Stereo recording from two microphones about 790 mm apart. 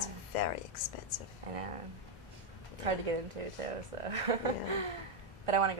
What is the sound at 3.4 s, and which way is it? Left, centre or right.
A woman's voice, right.